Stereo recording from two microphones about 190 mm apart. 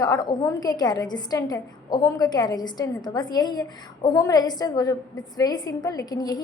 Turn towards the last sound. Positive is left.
turn(degrees=20)  # may be behind; listen again after turning